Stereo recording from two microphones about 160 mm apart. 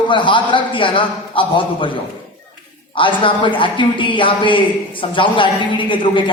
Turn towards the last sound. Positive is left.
turn(degrees=30)  # may be behind; listen again after turning